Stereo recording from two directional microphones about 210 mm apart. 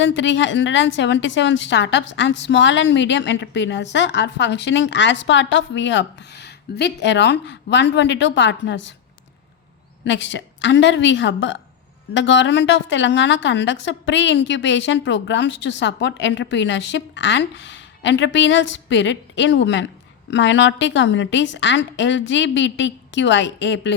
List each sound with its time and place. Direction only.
0.0 s a woman's voice: 60° left (ahead or behind)
10.0 s a woman's voice: 60° left (ahead or behind)